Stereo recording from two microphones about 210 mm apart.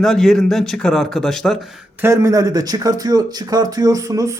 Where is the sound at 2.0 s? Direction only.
15° right (ahead or behind).